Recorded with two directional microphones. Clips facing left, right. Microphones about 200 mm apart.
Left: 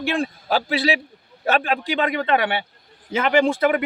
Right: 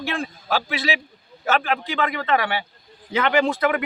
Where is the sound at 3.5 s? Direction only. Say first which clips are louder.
Left 2 dB; 25° left (ahead or behind).